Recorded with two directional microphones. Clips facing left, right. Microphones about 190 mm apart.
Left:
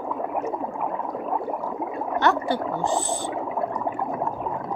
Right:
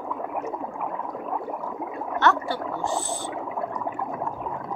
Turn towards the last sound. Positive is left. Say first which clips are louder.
# left 3 dB
turn(degrees=35)  # may be behind; listen again after turning